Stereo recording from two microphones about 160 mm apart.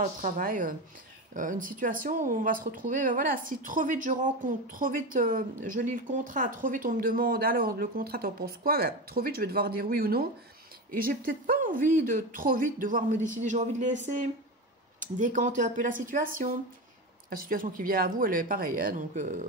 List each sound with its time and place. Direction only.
0.0 s speech: 60° right (ahead or behind)